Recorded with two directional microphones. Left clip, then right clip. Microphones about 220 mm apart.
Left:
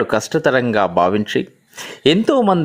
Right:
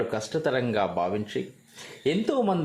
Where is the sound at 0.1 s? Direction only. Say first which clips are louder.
Left 11 dB; 35° left (ahead or behind).